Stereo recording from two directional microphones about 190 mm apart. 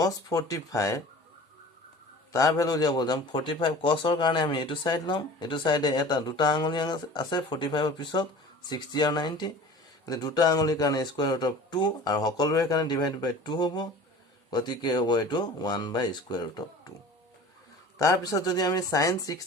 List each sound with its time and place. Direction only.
0.0 s speech: 20° left (ahead or behind)
2.3 s a man's voice: 15° left (ahead or behind)
17.9 s a man's voice: 15° left (ahead or behind)